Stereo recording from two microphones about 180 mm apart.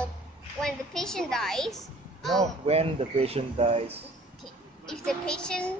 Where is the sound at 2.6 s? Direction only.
35° right (ahead or behind).